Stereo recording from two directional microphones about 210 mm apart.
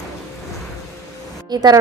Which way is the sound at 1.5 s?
20° right (ahead or behind).